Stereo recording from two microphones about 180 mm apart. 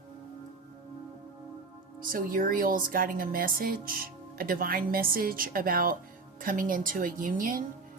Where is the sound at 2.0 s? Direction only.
50° right (ahead or behind).